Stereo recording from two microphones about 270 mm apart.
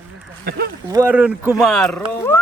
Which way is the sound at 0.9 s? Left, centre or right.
Centre.